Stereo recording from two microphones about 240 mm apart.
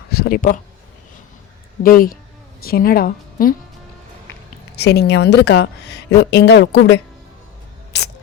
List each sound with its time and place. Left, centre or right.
0.1 s speech: left
1.8 s a woman's voice: left
4.8 s speech: left